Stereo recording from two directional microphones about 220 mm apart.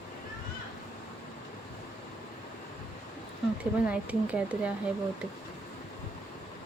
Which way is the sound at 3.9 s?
5° right (ahead or behind).